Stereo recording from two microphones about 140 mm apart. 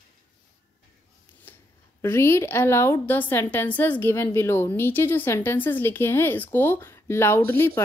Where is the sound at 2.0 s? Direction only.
20° left (ahead or behind).